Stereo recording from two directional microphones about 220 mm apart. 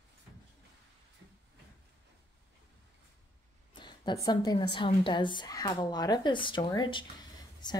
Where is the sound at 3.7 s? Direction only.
20° left (ahead or behind).